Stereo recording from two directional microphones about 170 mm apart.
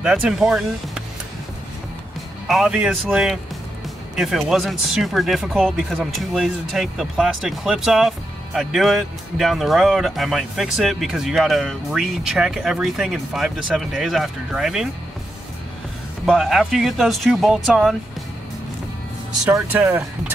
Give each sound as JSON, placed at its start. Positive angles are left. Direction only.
{"t": 0.0, "sound": "speech", "side_deg": -5}
{"t": 2.4, "sound": "speech", "side_deg": -5}
{"t": 16.3, "sound": "speech", "side_deg": 0}
{"t": 19.5, "sound": "speech", "side_deg": -10}